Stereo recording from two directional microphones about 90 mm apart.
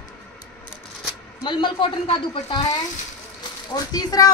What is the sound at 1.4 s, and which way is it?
A man's voice, 60° left (ahead or behind).